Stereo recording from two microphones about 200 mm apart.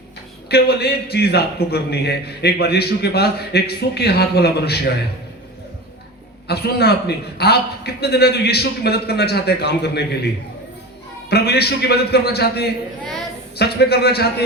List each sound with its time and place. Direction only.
0.4 s a man's voice: 55° left (ahead or behind)
6.5 s a man's voice: 55° left (ahead or behind)
11.3 s a man's voice: 55° left (ahead or behind)